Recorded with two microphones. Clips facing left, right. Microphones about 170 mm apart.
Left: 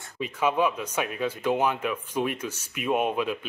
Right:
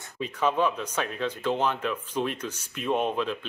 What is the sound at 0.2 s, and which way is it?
Speech, 10° left (ahead or behind).